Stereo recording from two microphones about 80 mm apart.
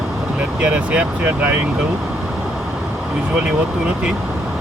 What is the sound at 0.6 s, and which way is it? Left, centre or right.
Speech, centre.